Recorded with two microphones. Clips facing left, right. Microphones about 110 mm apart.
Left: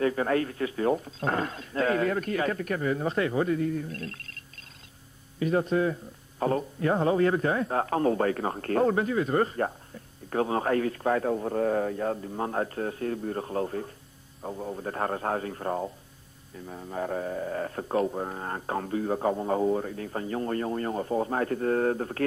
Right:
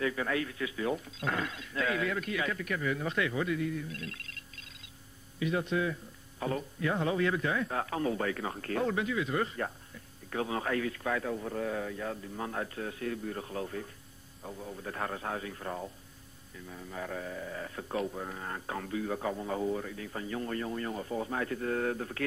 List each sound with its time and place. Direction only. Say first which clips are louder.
0.0 s a man's voice: left 7 dB; 40° left (ahead or behind)
5.4 s a man's voice: left 6 dB; 40° left (ahead or behind)